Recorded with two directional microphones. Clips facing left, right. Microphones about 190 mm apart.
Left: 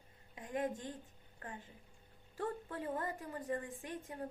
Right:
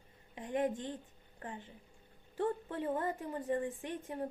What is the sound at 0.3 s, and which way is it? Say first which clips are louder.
Speech: right 4 dB; 25° right (ahead or behind).